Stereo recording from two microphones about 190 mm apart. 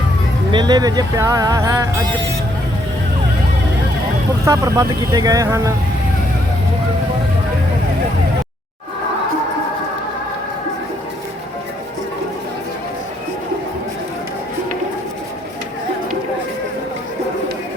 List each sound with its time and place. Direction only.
0.5 s speech: 20° right (ahead or behind)
4.4 s speech: 15° right (ahead or behind)